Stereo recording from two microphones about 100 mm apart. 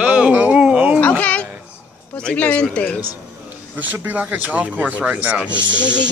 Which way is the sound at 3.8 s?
15° right (ahead or behind).